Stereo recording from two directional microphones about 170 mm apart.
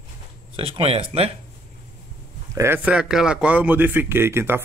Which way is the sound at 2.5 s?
15° right (ahead or behind).